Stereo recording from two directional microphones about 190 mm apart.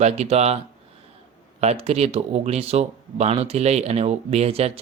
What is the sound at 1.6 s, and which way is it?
Speech, 35° right (ahead or behind).